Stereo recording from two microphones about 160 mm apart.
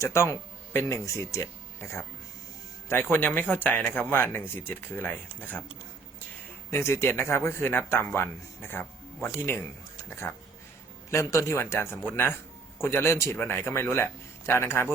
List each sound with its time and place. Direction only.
0.0 s speech: 15° left (ahead or behind)
2.9 s speech: 10° left (ahead or behind)
6.7 s speech: 15° left (ahead or behind)
11.1 s speech: 20° left (ahead or behind)